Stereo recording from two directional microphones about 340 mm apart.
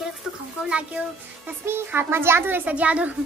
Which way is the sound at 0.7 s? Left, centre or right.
Centre.